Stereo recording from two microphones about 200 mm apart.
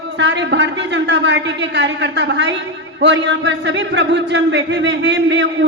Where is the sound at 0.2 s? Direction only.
60° right (ahead or behind).